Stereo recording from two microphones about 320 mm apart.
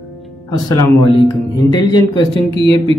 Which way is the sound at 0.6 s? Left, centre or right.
Centre.